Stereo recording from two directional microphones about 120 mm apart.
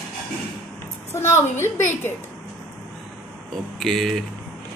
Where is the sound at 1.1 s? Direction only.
20° left (ahead or behind).